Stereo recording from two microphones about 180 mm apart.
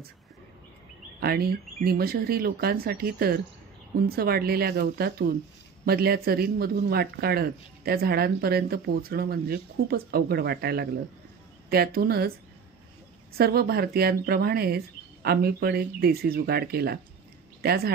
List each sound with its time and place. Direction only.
1.2 s speech: 60° right (ahead or behind)
13.3 s a woman's voice: 60° right (ahead or behind)